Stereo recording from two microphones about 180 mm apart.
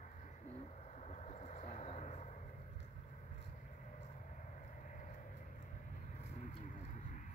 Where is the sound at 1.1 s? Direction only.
40° left (ahead or behind).